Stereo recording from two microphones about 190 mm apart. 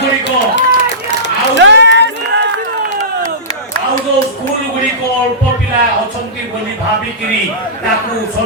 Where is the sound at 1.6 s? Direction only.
70° right (ahead or behind).